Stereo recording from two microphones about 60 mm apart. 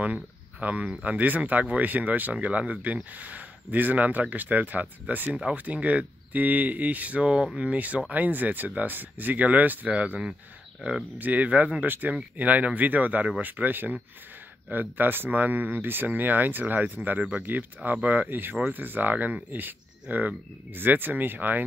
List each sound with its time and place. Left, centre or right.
0.0 s speech: right
10.8 s speech: centre
11.1 s speech: right